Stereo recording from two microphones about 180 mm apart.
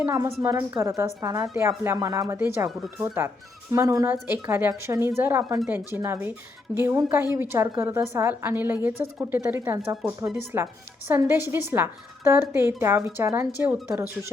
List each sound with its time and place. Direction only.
0.0 s a woman's voice: 15° right (ahead or behind)
2.6 s speech: centre (ahead or behind)
3.2 s a woman's voice: 15° right (ahead or behind)